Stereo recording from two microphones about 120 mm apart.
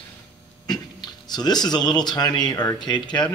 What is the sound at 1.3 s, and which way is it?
Speech, 35° left (ahead or behind).